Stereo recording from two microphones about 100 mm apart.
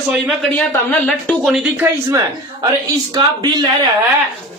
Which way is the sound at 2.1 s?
35° right (ahead or behind).